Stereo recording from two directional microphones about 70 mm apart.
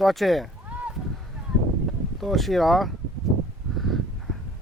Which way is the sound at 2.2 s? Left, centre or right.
Centre.